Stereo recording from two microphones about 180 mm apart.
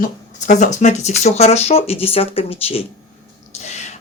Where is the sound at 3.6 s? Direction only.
40° left (ahead or behind).